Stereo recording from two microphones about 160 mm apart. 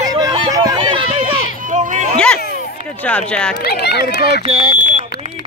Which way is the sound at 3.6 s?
90° left.